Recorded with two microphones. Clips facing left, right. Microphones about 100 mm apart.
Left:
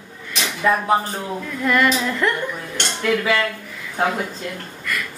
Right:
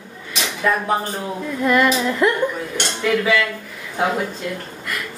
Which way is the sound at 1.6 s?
5° right (ahead or behind).